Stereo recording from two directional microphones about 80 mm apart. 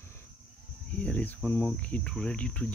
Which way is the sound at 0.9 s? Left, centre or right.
Centre.